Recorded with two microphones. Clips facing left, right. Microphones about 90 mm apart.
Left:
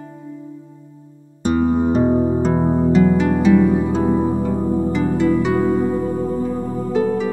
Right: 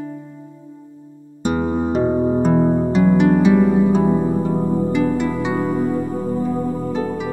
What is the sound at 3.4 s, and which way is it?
Music, 20° right (ahead or behind).